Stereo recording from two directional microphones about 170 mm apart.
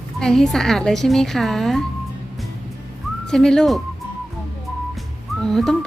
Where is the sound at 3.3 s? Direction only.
5° left (ahead or behind).